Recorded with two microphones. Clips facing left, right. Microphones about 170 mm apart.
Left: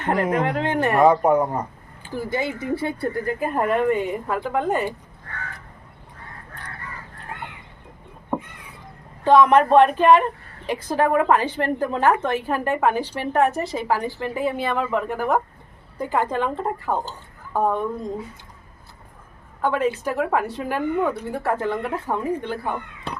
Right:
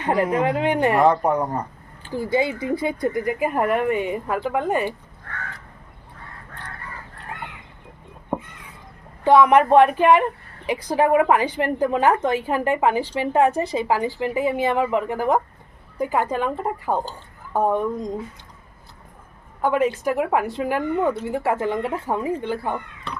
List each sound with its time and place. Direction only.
0.0 s a woman's voice: 15° right (ahead or behind)
0.9 s speech: 10° left (ahead or behind)
2.1 s a woman's voice: 15° right (ahead or behind)
9.2 s a woman's voice: 10° right (ahead or behind)
19.6 s a woman's voice: 15° right (ahead or behind)